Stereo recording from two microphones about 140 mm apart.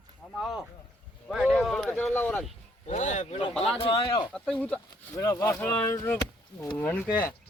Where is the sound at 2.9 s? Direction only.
55° left (ahead or behind).